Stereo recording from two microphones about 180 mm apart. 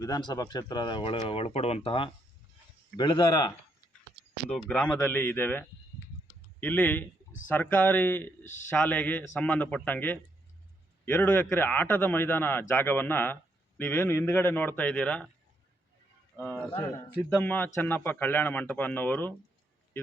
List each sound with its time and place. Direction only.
0.0 s speech: 20° left (ahead or behind)
4.4 s speech: 5° left (ahead or behind)
16.4 s speech: 10° right (ahead or behind)
16.8 s speech: 20° left (ahead or behind)